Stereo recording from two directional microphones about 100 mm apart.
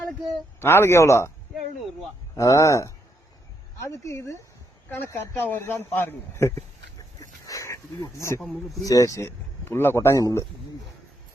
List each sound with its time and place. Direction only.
0.6 s speech: 25° left (ahead or behind)
2.3 s speech: 35° left (ahead or behind)
7.2 s a sound: 35° left (ahead or behind)
8.7 s speech: 35° left (ahead or behind)